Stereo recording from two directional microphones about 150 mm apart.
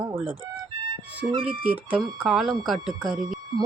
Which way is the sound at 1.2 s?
35° right (ahead or behind).